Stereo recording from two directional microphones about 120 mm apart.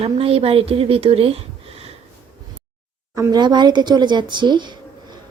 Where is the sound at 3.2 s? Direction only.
35° right (ahead or behind).